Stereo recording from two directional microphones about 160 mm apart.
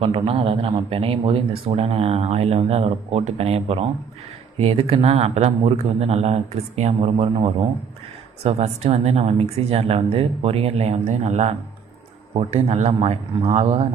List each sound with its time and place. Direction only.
0.0 s speech: 35° right (ahead or behind)